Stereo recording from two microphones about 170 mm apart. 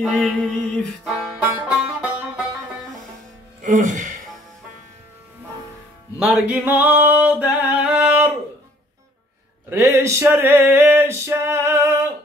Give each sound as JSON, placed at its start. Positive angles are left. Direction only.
{"t": 0.0, "sound": "music", "side_deg": -5}
{"t": 3.6, "sound": "speech", "side_deg": -50}
{"t": 6.1, "sound": "music", "side_deg": -5}
{"t": 9.7, "sound": "male singing", "side_deg": -15}